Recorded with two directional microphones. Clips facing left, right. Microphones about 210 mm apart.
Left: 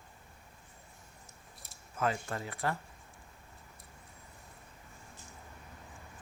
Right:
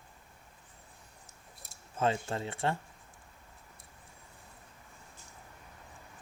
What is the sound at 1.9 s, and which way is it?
Speech, 25° right (ahead or behind).